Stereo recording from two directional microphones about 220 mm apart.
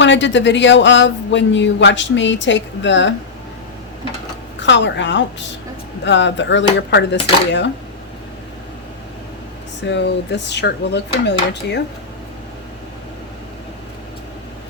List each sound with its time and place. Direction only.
0.0 s speech: 55° left (ahead or behind)
4.6 s speech: 55° left (ahead or behind)
9.8 s dishes: 55° left (ahead or behind)